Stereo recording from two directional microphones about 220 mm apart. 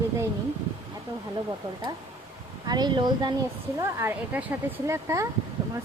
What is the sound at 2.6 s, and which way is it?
Speech, 20° right (ahead or behind).